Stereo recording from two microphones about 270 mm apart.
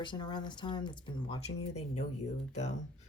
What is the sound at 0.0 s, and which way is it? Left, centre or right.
Speech, centre.